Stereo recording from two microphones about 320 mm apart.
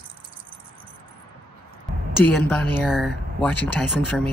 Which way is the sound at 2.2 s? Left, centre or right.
Centre.